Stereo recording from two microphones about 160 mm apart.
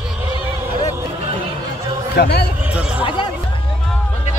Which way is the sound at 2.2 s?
90° left.